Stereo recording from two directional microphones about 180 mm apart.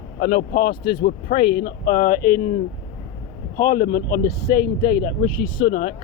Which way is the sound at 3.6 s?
50° left (ahead or behind).